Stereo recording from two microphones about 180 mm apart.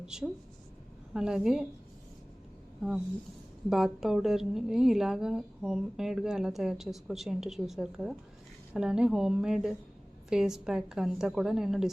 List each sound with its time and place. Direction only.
0.0 s a woman's voice: 5° right (ahead or behind)
2.8 s a woman's voice: 5° right (ahead or behind)